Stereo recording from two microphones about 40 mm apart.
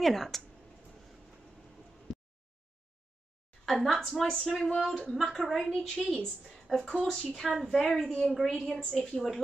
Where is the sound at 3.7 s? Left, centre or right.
Centre.